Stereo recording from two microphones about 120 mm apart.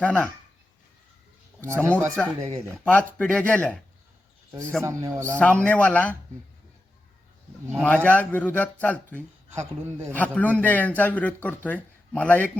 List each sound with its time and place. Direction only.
0.0 s a man's voice: 10° left (ahead or behind)
1.6 s a man's voice: 20° right (ahead or behind)
2.1 s a man's voice: 10° left (ahead or behind)
4.8 s a man's voice: 25° right (ahead or behind)
5.3 s a man's voice: 10° left (ahead or behind)
7.8 s a man's voice: 10° left (ahead or behind)